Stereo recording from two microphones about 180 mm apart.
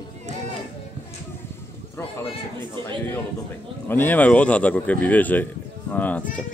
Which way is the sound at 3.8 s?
10° left (ahead or behind).